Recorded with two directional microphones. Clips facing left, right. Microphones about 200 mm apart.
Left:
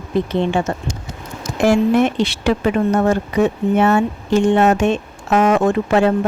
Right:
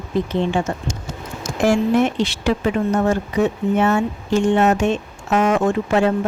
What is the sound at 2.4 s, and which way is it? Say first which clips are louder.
Speech: left 3 dB; 60° left (ahead or behind).